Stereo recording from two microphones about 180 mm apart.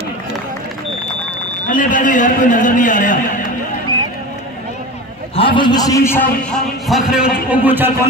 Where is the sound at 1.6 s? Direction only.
50° left (ahead or behind).